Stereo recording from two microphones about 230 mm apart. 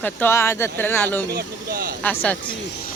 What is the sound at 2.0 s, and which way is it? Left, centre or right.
Speech, centre.